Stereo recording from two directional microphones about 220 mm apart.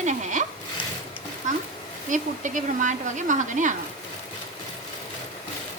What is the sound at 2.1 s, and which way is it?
Speech, 35° right (ahead or behind).